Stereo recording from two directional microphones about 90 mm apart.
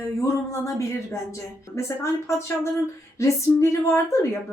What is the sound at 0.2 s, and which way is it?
A woman's voice, 35° left (ahead or behind).